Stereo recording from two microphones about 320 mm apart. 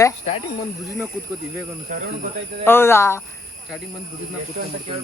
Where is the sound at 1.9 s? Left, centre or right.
Right.